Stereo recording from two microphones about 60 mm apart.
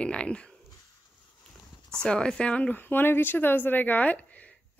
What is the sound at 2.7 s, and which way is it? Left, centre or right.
Speech, left.